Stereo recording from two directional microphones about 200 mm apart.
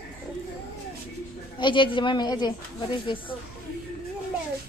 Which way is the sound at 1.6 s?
25° left (ahead or behind).